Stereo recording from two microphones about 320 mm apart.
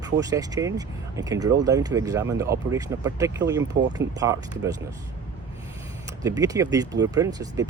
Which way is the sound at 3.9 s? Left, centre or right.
Centre.